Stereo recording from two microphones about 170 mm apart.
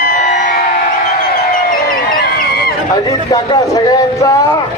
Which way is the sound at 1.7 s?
60° left (ahead or behind).